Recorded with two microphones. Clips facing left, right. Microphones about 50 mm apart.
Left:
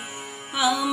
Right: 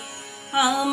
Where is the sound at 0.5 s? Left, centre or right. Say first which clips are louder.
Right 3 dB; right.